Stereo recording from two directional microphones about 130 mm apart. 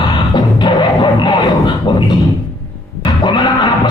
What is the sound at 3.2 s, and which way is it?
Music, 35° left (ahead or behind).